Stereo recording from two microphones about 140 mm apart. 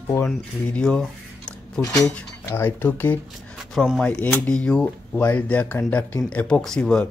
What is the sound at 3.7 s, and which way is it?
Speech, 5° right (ahead or behind).